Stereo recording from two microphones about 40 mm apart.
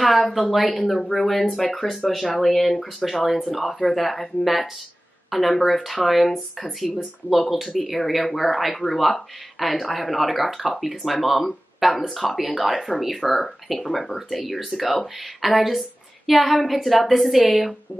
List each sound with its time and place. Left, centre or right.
0.0 s speech: centre
0.7 s speech: centre